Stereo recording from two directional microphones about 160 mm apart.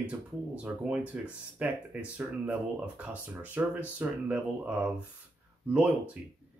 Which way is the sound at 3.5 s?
10° right (ahead or behind).